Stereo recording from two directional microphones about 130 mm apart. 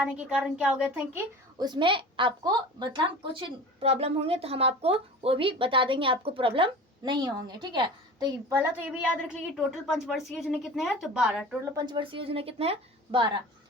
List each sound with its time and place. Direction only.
0.0 s a woman's voice: 10° right (ahead or behind)
1.5 s a woman's voice: 35° right (ahead or behind)
8.4 s a woman's voice: 15° right (ahead or behind)
11.7 s a woman's voice: 30° right (ahead or behind)